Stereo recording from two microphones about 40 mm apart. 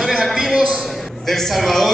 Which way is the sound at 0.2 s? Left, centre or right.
Centre.